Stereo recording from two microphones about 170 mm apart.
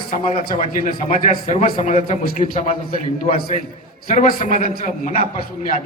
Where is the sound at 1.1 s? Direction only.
45° left (ahead or behind).